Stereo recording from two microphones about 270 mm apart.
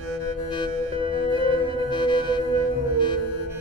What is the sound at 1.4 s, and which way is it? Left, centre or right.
Music, centre.